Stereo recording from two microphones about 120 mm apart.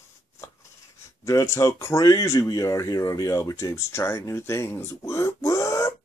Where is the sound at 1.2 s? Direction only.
25° left (ahead or behind).